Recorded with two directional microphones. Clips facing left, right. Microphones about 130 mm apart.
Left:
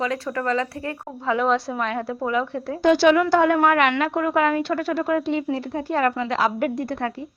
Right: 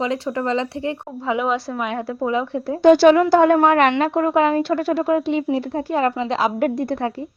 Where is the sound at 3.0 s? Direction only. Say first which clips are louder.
Right 4 dB; 35° right (ahead or behind).